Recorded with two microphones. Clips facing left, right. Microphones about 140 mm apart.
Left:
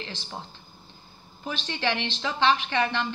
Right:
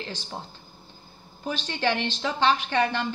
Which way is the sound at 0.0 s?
40° right (ahead or behind).